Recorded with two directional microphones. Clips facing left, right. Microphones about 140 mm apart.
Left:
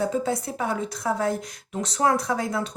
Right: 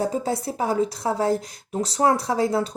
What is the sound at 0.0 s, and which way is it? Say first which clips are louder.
Speech: right 1 dB; 35° right (ahead or behind).